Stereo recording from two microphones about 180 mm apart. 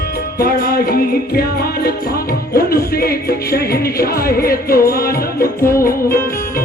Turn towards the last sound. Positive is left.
turn(degrees=55)  # may be behind; listen again after turning